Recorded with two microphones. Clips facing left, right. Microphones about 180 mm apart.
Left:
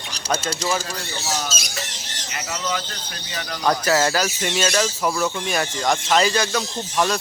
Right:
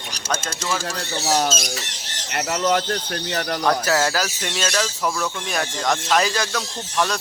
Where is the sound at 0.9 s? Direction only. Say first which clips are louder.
Right 5 dB; 65° right (ahead or behind).